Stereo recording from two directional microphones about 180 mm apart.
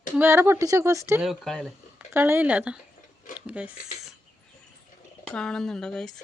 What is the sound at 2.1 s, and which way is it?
Speech, 10° right (ahead or behind).